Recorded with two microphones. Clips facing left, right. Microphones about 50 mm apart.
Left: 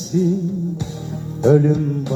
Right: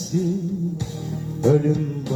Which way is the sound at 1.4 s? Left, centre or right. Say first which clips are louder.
Left 4 dB; left.